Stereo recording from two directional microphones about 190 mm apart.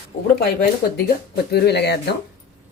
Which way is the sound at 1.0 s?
55° left (ahead or behind).